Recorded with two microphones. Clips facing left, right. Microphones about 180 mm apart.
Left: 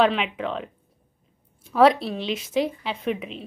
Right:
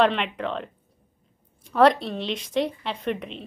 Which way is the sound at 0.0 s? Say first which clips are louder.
Left 1 dB; centre (ahead or behind).